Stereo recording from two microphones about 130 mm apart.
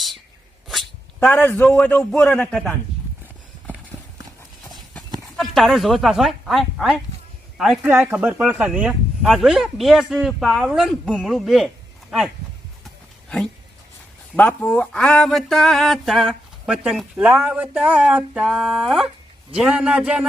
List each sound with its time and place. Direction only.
0.7 s a sound: centre (ahead or behind)
1.3 s a man's voice: 15° left (ahead or behind)
5.4 s speech: centre (ahead or behind)
7.8 s speech: 15° right (ahead or behind)
14.3 s a man's voice: 10° left (ahead or behind); by 20.2 s 10° right (ahead or behind)